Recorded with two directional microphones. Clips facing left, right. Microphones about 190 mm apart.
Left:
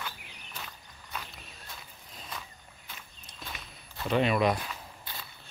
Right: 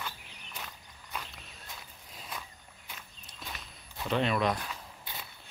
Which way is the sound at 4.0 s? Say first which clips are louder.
Left 3 dB; 5° left (ahead or behind).